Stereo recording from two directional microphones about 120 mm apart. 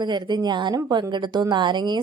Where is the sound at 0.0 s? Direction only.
40° right (ahead or behind).